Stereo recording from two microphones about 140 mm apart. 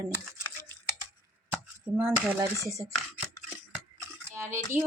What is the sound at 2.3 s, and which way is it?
Speech, 20° right (ahead or behind).